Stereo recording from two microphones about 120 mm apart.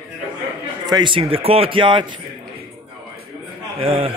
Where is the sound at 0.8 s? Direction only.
40° right (ahead or behind).